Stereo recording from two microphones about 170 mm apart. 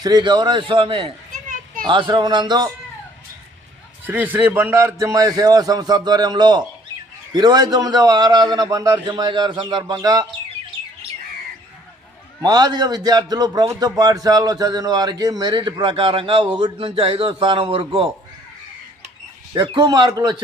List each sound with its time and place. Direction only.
0.0 s a man's voice: 25° right (ahead or behind)
4.0 s a man's voice: 10° right (ahead or behind)
12.4 s a man's voice: 25° right (ahead or behind)
19.5 s a man's voice: 25° right (ahead or behind)